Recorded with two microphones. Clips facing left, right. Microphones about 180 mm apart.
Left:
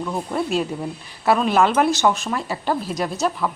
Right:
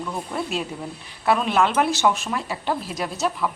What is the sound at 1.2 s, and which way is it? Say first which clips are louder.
Speech: left 3 dB; centre (ahead or behind).